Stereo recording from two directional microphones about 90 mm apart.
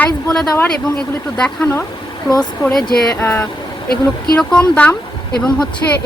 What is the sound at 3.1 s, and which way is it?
Speech, 25° left (ahead or behind).